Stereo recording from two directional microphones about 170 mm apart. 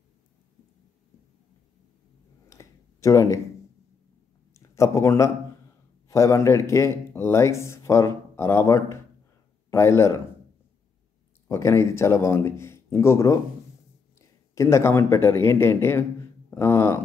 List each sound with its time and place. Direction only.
2.5 s a sound: 20° left (ahead or behind)
4.6 s a man's voice: 15° left (ahead or behind)
11.4 s speech: 15° left (ahead or behind)